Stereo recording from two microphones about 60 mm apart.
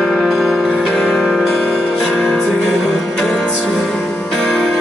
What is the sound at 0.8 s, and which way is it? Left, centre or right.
Music, centre.